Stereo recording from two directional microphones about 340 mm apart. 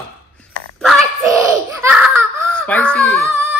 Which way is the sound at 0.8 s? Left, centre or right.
Centre.